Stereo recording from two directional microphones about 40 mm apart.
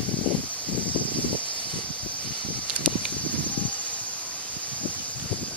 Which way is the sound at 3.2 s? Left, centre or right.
Left.